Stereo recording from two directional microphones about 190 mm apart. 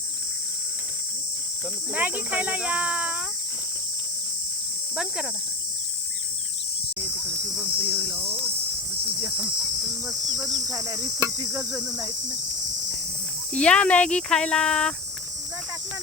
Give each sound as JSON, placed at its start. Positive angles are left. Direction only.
{"t": 2.0, "sound": "cricket", "side_deg": -10}
{"t": 7.0, "sound": "cricket", "side_deg": -10}
{"t": 7.8, "sound": "cricket", "side_deg": -25}
{"t": 10.1, "sound": "cricket", "side_deg": -15}
{"t": 11.7, "sound": "speech", "side_deg": -5}
{"t": 13.5, "sound": "speech", "side_deg": 5}